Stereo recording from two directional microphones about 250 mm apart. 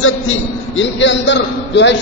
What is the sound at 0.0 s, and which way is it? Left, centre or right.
A man's voice, left.